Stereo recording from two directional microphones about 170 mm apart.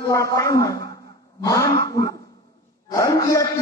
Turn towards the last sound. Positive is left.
turn(degrees=20)  # may be behind; listen again after turning